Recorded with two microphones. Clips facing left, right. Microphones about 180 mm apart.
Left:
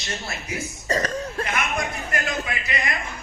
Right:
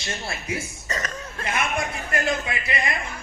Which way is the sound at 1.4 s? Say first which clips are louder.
Right 3 dB; 30° right (ahead or behind).